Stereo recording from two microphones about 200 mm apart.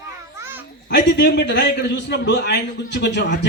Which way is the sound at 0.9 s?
60° left (ahead or behind).